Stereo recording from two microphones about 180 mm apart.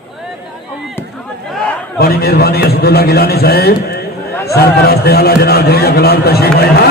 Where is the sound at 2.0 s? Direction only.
60° left (ahead or behind).